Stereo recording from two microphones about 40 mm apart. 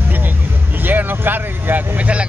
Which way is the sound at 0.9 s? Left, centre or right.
Right.